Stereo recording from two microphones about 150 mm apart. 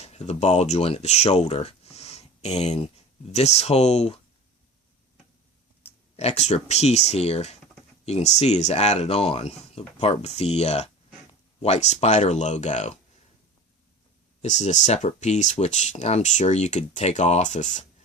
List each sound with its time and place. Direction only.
0.0 s speech: 45° left (ahead or behind)
6.1 s speech: 45° left (ahead or behind)
14.4 s speech: 50° left (ahead or behind)